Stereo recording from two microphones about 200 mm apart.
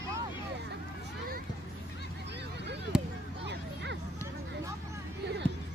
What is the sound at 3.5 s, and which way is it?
Music, 60° right (ahead or behind).